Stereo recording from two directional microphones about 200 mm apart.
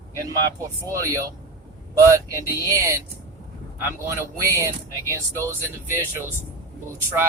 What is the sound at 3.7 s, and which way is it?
Speech, 10° right (ahead or behind).